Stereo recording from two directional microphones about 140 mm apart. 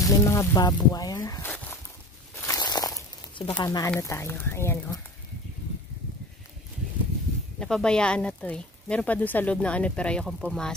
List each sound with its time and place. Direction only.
0.0 s speech: 25° left (ahead or behind)
2.3 s a sound: 25° left (ahead or behind)
3.5 s speech: 30° left (ahead or behind)
7.5 s speech: 5° left (ahead or behind)